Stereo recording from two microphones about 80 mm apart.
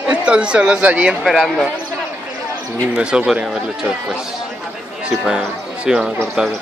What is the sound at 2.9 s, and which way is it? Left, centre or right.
Speech, centre.